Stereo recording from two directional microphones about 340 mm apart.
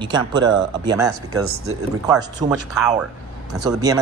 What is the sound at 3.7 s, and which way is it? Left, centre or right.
Speech, centre.